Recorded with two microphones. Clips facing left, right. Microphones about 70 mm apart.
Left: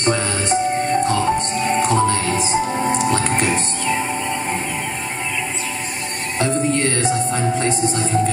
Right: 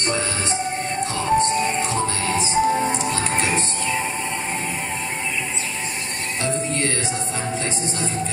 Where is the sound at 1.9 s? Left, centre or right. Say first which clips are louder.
Left 7 dB; left.